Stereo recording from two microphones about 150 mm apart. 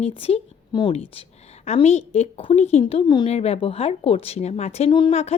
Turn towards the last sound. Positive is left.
turn(degrees=30)  # may be behind; listen again after turning